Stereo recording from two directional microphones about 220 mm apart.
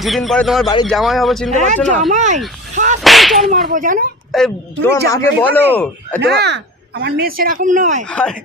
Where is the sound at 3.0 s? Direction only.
Centre (ahead or behind).